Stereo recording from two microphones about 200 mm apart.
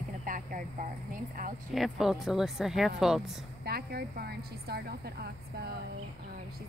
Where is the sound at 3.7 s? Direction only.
50° right (ahead or behind).